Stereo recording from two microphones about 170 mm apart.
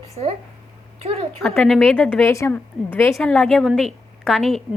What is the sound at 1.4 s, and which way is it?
A woman's voice, centre (ahead or behind).